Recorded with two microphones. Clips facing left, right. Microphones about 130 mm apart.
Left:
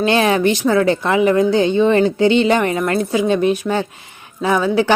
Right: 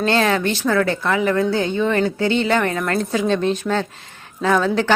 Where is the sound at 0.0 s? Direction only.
15° left (ahead or behind).